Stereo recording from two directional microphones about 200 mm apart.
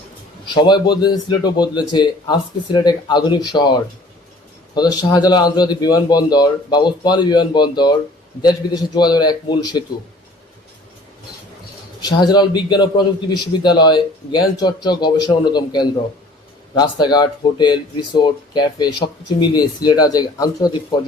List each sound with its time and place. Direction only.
0.4 s speech: 20° left (ahead or behind)
11.9 s speech: 20° left (ahead or behind)